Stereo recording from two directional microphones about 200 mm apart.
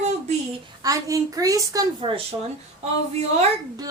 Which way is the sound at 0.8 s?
15° right (ahead or behind).